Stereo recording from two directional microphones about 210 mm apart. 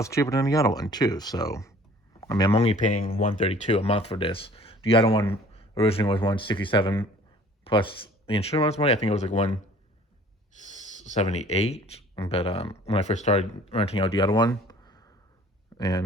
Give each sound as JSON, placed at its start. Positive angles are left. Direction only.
{"t": 0.0, "sound": "speech", "side_deg": 15}
{"t": 3.4, "sound": "speech", "side_deg": 30}
{"t": 10.7, "sound": "speech", "side_deg": 35}